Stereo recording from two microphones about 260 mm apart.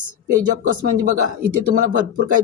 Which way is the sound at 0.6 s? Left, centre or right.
Right.